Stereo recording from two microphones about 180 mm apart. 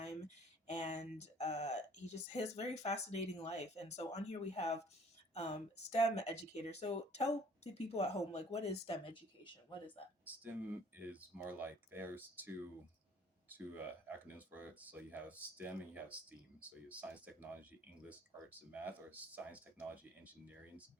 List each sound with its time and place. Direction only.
0.7 s speech: 40° left (ahead or behind)
10.2 s speech: 10° right (ahead or behind)